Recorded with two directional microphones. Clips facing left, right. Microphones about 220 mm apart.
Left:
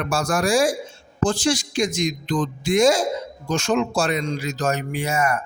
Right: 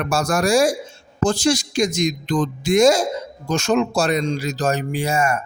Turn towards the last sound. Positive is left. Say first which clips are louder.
# right 2 dB
turn(degrees=-25)  # may be behind; listen again after turning